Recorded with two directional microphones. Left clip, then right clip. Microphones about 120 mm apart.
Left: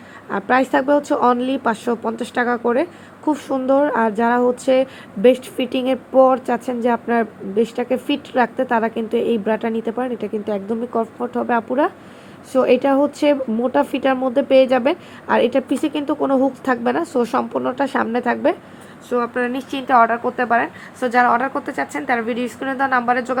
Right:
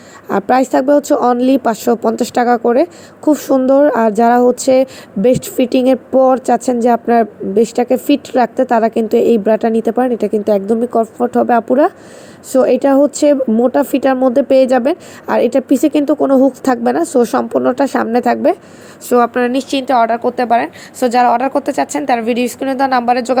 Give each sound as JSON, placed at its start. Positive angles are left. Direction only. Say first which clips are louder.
{"t": 0.3, "sound": "a woman's voice", "louder": "right 5 dB", "side_deg": -35}
{"t": 17.0, "sound": "a woman's voice", "louder": "right 6 dB", "side_deg": -20}
{"t": 19.1, "sound": "a woman's voice", "louder": "right 8 dB", "side_deg": -50}
{"t": 20.2, "sound": "a woman's voice", "louder": "right 5 dB", "side_deg": -20}
{"t": 21.0, "sound": "a woman's voice", "louder": "right 5 dB", "side_deg": -45}